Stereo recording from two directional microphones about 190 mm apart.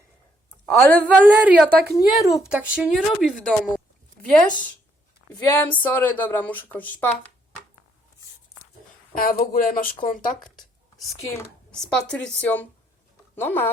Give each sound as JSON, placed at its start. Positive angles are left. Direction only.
{"t": 0.6, "sound": "a woman's voice", "side_deg": 10}
{"t": 1.2, "sound": "speech", "side_deg": -10}
{"t": 5.5, "sound": "speech", "side_deg": 10}
{"t": 9.1, "sound": "speech", "side_deg": 45}
{"t": 10.0, "sound": "speech", "side_deg": 25}
{"t": 11.7, "sound": "speech", "side_deg": 5}